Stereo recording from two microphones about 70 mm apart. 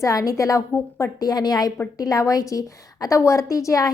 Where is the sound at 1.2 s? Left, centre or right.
Left.